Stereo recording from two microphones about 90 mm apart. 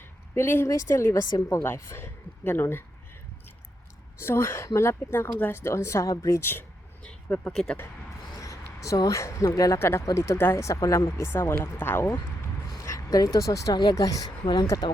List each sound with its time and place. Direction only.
0.0 s a sound: 25° left (ahead or behind)
0.7 s speech: 35° left (ahead or behind)
4.2 s speech: 30° left (ahead or behind)
7.0 s a sound: 15° left (ahead or behind)
7.5 s speech: 5° left (ahead or behind)
8.4 s speech: 35° left (ahead or behind)
9.7 s speech: 30° left (ahead or behind)
12.6 s a sound: 40° left (ahead or behind)
13.8 s speech: 40° left (ahead or behind)